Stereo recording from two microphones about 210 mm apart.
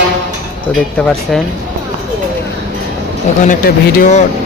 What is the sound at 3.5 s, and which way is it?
Speech, 40° left (ahead or behind).